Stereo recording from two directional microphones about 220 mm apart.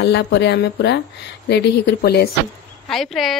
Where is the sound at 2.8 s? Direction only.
Centre (ahead or behind).